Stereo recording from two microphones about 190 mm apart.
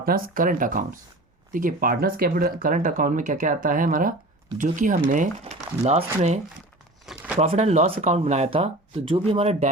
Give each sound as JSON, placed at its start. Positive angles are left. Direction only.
{"t": 0.0, "sound": "speech", "side_deg": -50}
{"t": 7.0, "sound": "a sound", "side_deg": 0}
{"t": 7.3, "sound": "speech", "side_deg": -35}